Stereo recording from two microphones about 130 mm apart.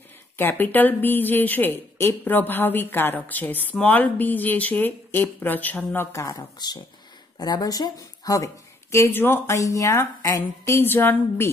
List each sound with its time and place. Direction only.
0.4 s speech: 15° left (ahead or behind)
6.1 s a woman's voice: 25° left (ahead or behind)